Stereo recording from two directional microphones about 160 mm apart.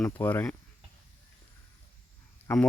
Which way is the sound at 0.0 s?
10° left (ahead or behind).